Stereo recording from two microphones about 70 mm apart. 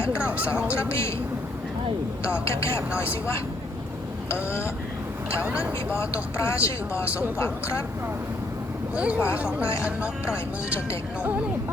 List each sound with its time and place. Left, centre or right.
0.2 s speech: centre
0.7 s speech: left
2.2 s speech: left
5.5 s speech: centre
5.9 s speech: left
9.0 s speech: centre
10.3 s speech: left